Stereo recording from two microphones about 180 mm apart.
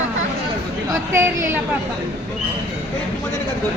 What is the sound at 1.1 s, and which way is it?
Speech, 15° right (ahead or behind).